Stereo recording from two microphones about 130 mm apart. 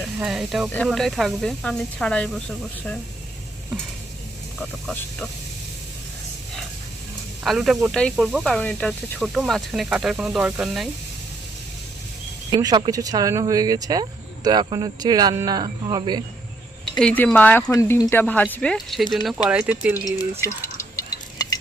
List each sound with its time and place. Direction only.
0.2 s speech: 5° right (ahead or behind)
4.6 s speech: 5° left (ahead or behind)
7.4 s speech: centre (ahead or behind)
12.5 s speech: 30° right (ahead or behind)
17.0 s speech: 10° left (ahead or behind)
17.7 s speech: 25° left (ahead or behind); by 19.4 s centre (ahead or behind)
19.5 s speech: 10° right (ahead or behind)
20.4 s drip: 25° left (ahead or behind)